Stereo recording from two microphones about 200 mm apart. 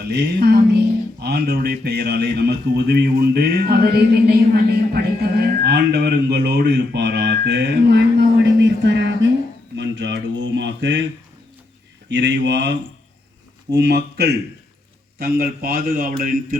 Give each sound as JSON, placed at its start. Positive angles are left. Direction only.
{"t": 0.1, "sound": "a man's voice", "side_deg": -55}
{"t": 9.7, "sound": "a sound", "side_deg": -60}
{"t": 12.0, "sound": "speech", "side_deg": -60}
{"t": 13.7, "sound": "a man's voice", "side_deg": -55}